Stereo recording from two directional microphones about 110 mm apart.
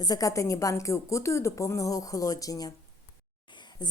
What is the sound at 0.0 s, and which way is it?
A woman's voice, 35° left (ahead or behind).